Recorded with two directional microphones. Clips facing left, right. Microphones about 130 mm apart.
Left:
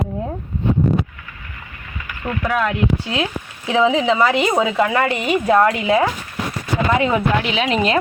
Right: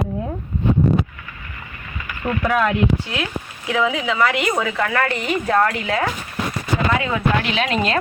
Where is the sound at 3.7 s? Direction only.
25° left (ahead or behind).